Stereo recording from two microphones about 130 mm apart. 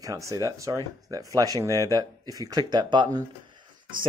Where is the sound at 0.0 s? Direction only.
25° right (ahead or behind).